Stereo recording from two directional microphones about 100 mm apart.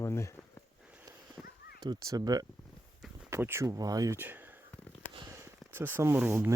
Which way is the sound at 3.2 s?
25° right (ahead or behind).